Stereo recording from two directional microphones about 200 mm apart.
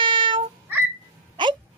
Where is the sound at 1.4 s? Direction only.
20° right (ahead or behind).